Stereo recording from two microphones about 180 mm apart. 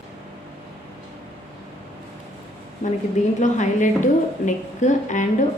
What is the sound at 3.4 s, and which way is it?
A woman's voice, 45° left (ahead or behind).